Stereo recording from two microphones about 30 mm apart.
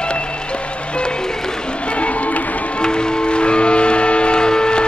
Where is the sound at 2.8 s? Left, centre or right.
Left.